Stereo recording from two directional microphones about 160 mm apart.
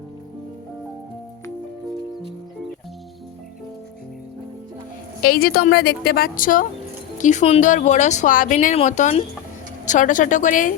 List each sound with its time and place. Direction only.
5.2 s a woman's voice: 65° left (ahead or behind)
8.7 s a woman's voice: 45° left (ahead or behind)